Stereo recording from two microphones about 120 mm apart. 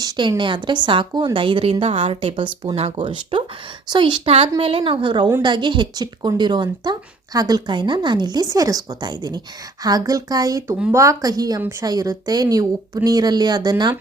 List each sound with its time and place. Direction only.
0.0 s a woman's voice: 35° right (ahead or behind)
4.3 s a woman's voice: 55° right (ahead or behind); by 13.9 s 35° right (ahead or behind)